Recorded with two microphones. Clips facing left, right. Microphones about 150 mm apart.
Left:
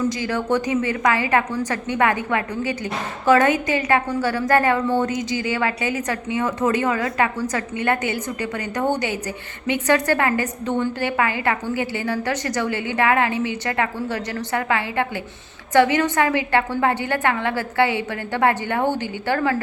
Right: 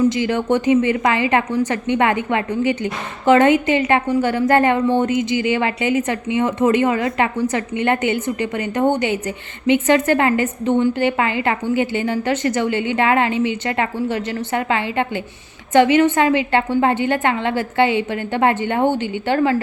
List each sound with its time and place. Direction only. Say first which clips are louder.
0.1 s a woman's voice: right 4 dB; 20° right (ahead or behind)